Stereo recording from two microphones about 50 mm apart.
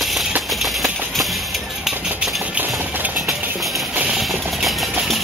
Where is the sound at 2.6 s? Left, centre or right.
Right.